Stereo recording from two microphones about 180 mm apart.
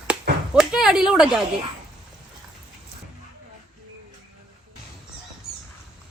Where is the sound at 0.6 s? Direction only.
5° right (ahead or behind).